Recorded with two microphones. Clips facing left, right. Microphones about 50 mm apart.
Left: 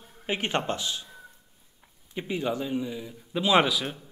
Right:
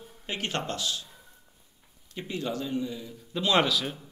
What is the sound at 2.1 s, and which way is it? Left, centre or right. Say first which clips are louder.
A man's voice: left 3 dB; centre.